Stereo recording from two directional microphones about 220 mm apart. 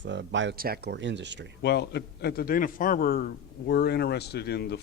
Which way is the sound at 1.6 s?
50° left (ahead or behind).